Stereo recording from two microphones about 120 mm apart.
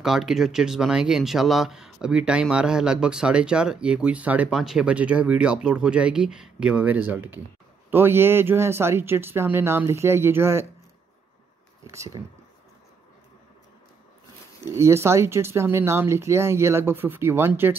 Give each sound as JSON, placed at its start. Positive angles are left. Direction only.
{"t": 0.0, "sound": "speech", "side_deg": -5}
{"t": 11.9, "sound": "speech", "side_deg": -25}
{"t": 14.8, "sound": "speech", "side_deg": -20}